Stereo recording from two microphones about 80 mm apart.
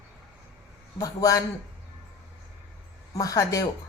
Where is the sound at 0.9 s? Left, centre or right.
Left.